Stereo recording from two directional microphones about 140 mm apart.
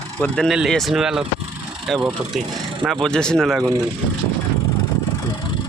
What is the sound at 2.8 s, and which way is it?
Speech, 5° left (ahead or behind).